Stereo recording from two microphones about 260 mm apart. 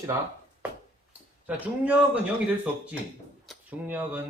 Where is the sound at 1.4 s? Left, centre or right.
Centre.